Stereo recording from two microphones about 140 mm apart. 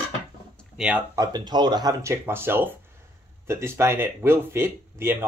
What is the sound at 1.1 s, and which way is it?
Speech, 25° right (ahead or behind).